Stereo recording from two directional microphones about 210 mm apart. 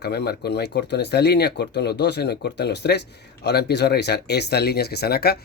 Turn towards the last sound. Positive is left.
turn(degrees=50)  # may be behind; listen again after turning